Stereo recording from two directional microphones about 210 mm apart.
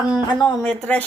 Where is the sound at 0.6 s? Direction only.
5° left (ahead or behind).